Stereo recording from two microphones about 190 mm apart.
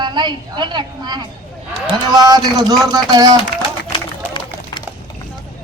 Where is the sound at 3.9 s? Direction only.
25° left (ahead or behind).